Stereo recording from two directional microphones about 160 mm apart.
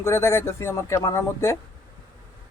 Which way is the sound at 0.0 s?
15° left (ahead or behind).